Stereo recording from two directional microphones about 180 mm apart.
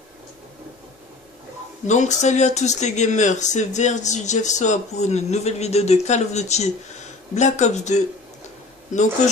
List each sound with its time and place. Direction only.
1.9 s speech: 40° left (ahead or behind)